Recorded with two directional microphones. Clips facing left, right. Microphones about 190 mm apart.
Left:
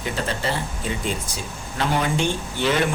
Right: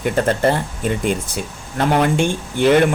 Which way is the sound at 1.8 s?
60° right (ahead or behind).